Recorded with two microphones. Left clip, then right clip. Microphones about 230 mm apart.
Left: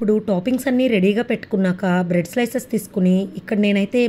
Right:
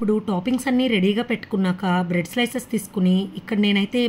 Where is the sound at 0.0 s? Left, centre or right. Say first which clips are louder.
Left 4 dB; centre.